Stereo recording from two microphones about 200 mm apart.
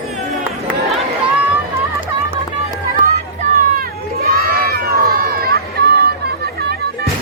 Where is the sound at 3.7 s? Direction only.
50° right (ahead or behind).